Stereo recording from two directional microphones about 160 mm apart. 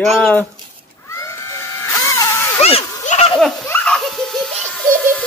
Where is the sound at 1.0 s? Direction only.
20° left (ahead or behind).